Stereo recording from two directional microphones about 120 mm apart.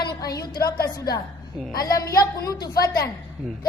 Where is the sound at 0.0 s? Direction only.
35° left (ahead or behind).